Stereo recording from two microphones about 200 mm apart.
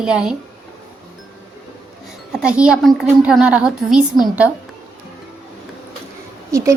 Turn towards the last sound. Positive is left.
turn(degrees=-15)  # may be behind; listen again after turning